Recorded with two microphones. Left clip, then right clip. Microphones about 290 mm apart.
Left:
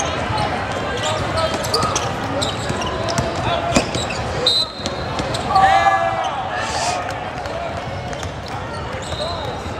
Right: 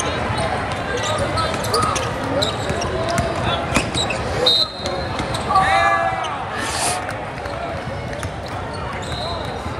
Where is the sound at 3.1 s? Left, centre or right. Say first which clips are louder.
Left 1 dB; left.